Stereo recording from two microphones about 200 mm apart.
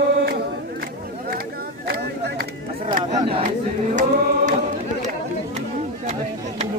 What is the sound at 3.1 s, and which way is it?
Speech, 25° right (ahead or behind).